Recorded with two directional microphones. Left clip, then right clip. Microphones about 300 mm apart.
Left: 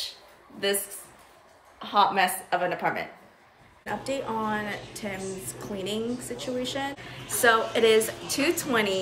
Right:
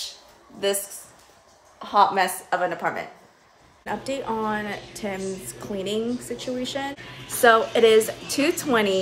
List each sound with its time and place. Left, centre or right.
1.8 s a woman's voice: centre
3.8 s a woman's voice: centre